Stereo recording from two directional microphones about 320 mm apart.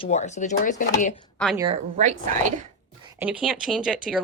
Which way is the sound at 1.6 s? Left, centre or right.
Centre.